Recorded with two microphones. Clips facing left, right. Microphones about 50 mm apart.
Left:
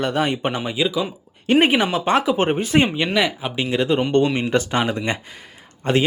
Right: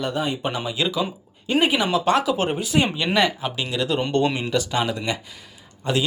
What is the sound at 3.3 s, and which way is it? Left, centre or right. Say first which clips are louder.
Speech: left 4 dB; left.